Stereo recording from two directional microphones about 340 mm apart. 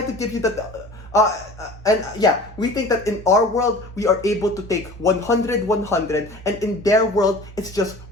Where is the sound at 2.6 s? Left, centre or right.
Centre.